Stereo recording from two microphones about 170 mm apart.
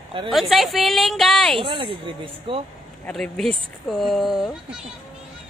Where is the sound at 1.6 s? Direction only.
30° right (ahead or behind).